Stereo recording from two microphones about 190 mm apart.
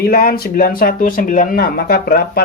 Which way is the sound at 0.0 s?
50° left (ahead or behind).